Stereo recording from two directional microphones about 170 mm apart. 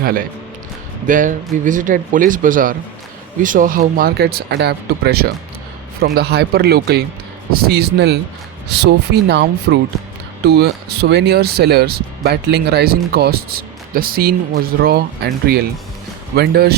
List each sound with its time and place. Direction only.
0.0 s speech: 60° right (ahead or behind)